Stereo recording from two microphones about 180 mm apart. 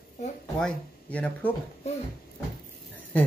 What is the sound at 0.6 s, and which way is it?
Speech, 5° left (ahead or behind).